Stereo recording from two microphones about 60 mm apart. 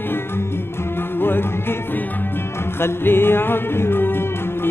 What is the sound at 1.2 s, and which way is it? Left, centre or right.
Music, left.